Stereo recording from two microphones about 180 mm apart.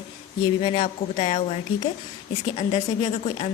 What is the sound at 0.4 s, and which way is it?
A woman's voice, 30° left (ahead or behind).